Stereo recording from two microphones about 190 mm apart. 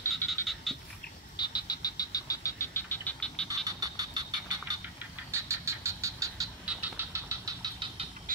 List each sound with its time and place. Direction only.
0.2 s frog: 10° left (ahead or behind)
1.3 s frog: 20° left (ahead or behind); by 3.4 s 5° left (ahead or behind)
3.4 s frog: 20° right (ahead or behind)
5.3 s a sound: 15° right (ahead or behind)
6.6 s vehicle: 10° right (ahead or behind)